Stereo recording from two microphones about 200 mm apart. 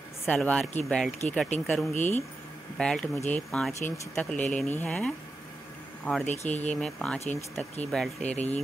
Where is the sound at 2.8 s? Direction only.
5° left (ahead or behind).